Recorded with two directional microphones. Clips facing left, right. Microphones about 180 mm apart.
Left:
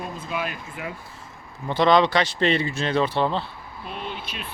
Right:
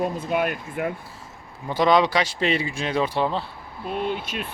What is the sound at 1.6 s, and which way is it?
Speech, 10° right (ahead or behind).